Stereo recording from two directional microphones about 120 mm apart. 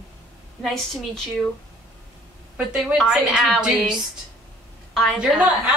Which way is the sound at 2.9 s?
5° right (ahead or behind).